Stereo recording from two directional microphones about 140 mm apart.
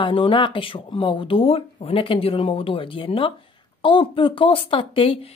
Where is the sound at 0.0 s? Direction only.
40° left (ahead or behind).